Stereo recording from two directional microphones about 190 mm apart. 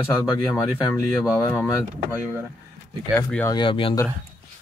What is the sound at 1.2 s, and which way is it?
Speech, 20° left (ahead or behind).